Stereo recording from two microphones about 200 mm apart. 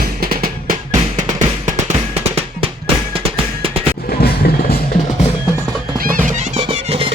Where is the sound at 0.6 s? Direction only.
40° right (ahead or behind).